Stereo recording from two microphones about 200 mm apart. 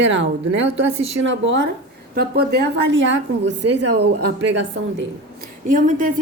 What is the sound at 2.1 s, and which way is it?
Speech, 50° right (ahead or behind).